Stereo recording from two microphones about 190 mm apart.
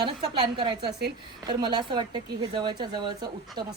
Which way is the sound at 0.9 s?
60° right (ahead or behind).